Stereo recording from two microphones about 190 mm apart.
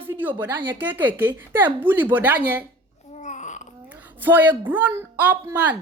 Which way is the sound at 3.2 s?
40° left (ahead or behind).